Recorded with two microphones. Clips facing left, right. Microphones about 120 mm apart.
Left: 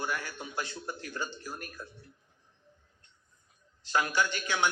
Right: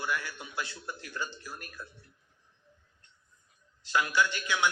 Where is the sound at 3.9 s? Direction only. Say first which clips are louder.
Right 1 dB; 45° left (ahead or behind).